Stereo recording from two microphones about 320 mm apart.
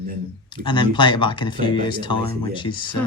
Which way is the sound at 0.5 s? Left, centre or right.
Centre.